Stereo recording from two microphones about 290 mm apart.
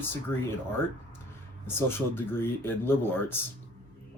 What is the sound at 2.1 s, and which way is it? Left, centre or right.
Speech, centre.